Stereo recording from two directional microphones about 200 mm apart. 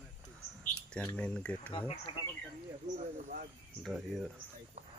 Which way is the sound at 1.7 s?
25° left (ahead or behind).